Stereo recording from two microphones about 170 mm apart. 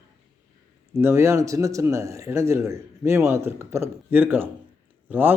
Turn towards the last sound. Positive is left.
turn(degrees=-10)  # may be behind; listen again after turning